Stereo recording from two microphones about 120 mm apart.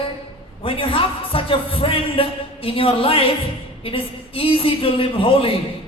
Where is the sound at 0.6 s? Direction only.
50° left (ahead or behind).